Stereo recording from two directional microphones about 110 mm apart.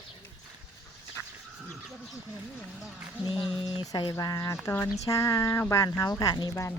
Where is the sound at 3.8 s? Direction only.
45° left (ahead or behind).